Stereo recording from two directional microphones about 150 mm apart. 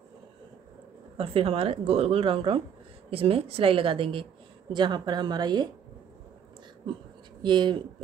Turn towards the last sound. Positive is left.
turn(degrees=-30)  # may be behind; listen again after turning